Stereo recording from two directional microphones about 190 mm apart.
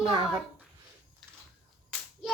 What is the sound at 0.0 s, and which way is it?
Speech, 30° right (ahead or behind).